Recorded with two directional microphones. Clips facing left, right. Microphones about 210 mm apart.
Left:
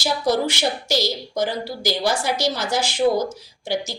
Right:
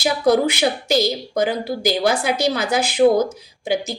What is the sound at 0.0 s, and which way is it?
A woman's voice, 60° right (ahead or behind).